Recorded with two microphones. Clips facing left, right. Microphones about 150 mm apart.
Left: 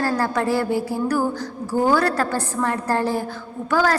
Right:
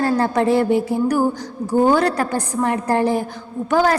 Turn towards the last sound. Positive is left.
turn(degrees=-20)  # may be behind; listen again after turning